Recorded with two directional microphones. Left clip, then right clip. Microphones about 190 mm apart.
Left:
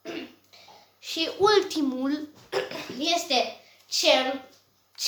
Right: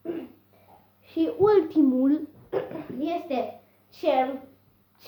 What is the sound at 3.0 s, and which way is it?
Speech, 25° left (ahead or behind).